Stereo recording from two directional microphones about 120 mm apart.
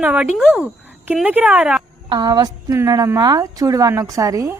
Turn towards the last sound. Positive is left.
turn(degrees=-30)  # may be behind; listen again after turning